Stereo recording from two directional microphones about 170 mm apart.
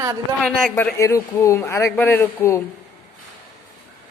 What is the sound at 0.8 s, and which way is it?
A man's voice, 15° left (ahead or behind).